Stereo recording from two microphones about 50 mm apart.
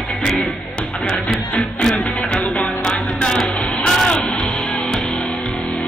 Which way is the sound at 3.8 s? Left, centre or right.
Centre.